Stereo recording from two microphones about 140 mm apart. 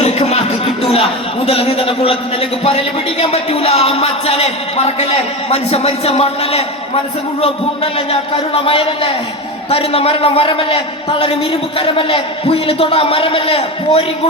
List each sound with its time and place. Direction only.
0.0 s music: 50° left (ahead or behind)
1.5 s a man's voice: 45° left (ahead or behind)
8.1 s a man's voice: 40° left (ahead or behind)